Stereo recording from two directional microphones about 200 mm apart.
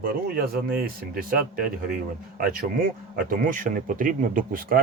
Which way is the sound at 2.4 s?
45° right (ahead or behind).